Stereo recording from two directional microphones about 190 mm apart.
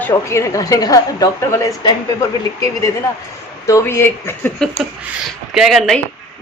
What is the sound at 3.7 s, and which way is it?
A woman's voice, 15° left (ahead or behind).